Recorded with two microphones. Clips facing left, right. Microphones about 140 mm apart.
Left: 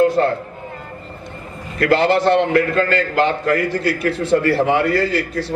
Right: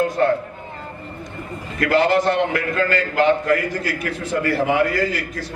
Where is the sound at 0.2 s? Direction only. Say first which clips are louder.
Left 1 dB; 35° left (ahead or behind).